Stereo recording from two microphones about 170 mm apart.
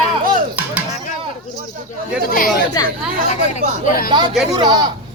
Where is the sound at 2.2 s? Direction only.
55° left (ahead or behind).